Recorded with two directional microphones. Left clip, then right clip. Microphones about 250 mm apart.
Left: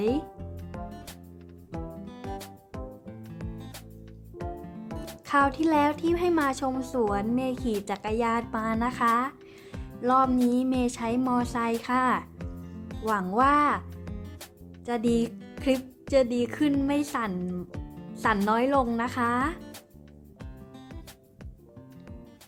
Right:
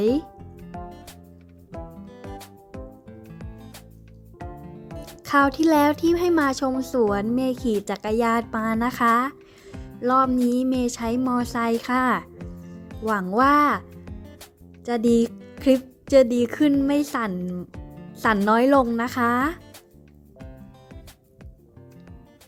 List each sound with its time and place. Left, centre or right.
0.0 s a woman's voice: right
1.7 s music: centre
5.2 s a woman's voice: right
14.8 s a woman's voice: right
18.1 s music: right
18.4 s a woman's voice: right